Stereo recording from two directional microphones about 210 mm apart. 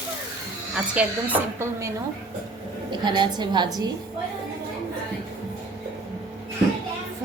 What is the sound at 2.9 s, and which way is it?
Speech, 20° right (ahead or behind).